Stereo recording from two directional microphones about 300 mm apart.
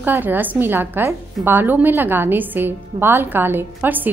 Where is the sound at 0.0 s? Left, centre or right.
Centre.